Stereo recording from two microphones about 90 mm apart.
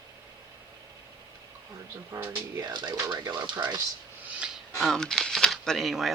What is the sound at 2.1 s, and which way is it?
Speech, 40° right (ahead or behind).